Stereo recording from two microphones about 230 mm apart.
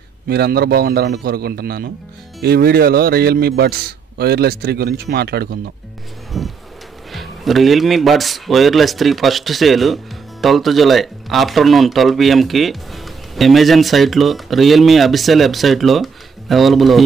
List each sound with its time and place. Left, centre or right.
0.3 s a man's voice: right
6.3 s music: centre
7.1 s speech: centre